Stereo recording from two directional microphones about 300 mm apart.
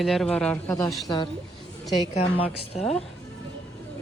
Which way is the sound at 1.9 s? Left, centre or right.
Centre.